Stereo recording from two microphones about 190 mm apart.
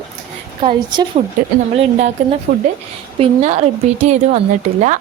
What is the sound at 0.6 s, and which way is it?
Speech, 25° right (ahead or behind).